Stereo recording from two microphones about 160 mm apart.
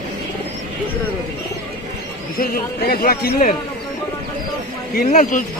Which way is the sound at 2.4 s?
65° left (ahead or behind).